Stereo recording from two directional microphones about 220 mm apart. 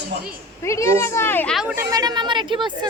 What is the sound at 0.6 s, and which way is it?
A child's voice, 15° left (ahead or behind).